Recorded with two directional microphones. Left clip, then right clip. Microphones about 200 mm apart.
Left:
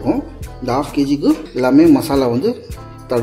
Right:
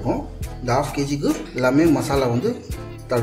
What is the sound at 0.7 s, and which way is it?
Speech, 15° left (ahead or behind).